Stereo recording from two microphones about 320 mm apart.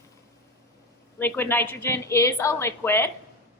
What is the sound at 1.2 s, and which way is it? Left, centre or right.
A woman's voice, centre.